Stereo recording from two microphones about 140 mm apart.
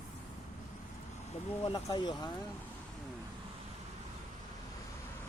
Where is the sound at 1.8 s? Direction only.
30° left (ahead or behind).